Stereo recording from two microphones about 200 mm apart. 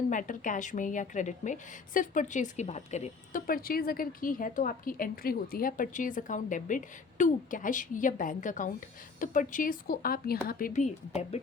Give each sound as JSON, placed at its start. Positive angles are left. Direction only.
{"t": 0.1, "sound": "a woman's voice", "side_deg": 40}
{"t": 11.1, "sound": "a woman's voice", "side_deg": 30}